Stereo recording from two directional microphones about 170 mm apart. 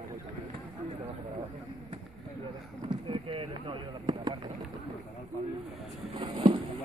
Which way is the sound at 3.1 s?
30° right (ahead or behind).